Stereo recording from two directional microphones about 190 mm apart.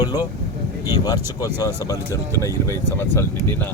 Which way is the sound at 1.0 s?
20° left (ahead or behind).